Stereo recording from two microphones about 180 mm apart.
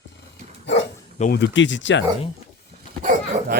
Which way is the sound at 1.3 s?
85° left.